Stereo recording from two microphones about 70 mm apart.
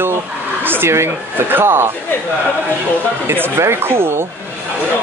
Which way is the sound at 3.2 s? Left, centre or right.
Right.